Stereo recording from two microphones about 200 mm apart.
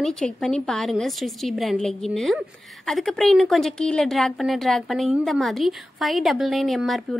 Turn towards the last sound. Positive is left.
turn(degrees=0)  # may be behind; listen again after turning